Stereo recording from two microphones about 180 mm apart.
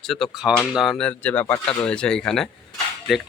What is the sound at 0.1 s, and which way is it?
Speech, centre (ahead or behind).